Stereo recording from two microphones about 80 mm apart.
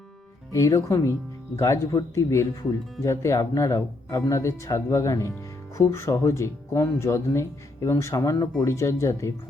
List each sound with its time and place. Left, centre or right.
0.5 s speech: left